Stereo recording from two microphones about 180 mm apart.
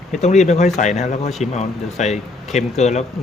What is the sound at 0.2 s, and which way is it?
Speech, 40° left (ahead or behind).